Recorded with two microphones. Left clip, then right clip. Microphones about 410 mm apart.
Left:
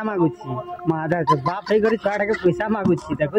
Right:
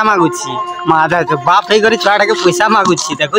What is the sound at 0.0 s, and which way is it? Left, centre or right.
A man's voice, left.